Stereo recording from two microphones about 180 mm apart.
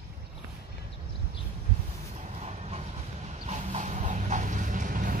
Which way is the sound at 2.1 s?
40° right (ahead or behind).